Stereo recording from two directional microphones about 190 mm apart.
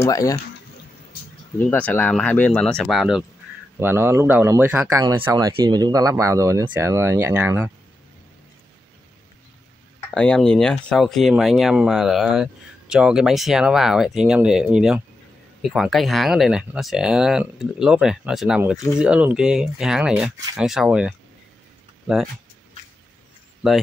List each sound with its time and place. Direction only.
0.0 s speech: 15° left (ahead or behind)
1.7 s speech: 10° left (ahead or behind)
3.8 s speech: 10° right (ahead or behind)
10.1 s speech: 5° left (ahead or behind)
23.6 s speech: centre (ahead or behind)